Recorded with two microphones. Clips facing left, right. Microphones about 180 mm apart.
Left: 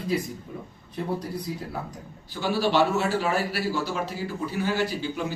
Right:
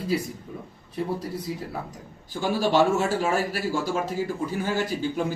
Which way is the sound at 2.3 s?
45° right (ahead or behind).